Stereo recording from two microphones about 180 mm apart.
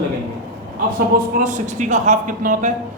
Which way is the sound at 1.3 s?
45° right (ahead or behind).